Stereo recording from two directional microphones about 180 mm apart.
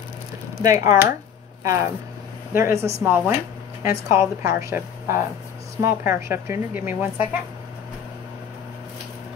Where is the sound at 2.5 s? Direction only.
15° right (ahead or behind).